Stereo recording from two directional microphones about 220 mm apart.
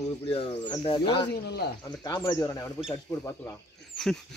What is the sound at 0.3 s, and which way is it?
Speech, 25° left (ahead or behind).